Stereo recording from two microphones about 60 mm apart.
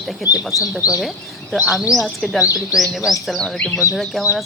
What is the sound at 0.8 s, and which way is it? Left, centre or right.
Speech, left.